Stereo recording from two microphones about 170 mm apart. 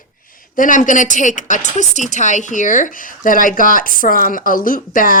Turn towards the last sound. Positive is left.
turn(degrees=55)  # may be behind; listen again after turning